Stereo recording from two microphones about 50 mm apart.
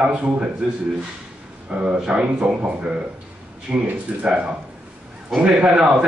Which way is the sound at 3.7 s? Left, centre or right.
Right.